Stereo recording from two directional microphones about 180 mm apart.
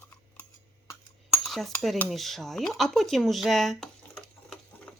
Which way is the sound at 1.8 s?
5° left (ahead or behind).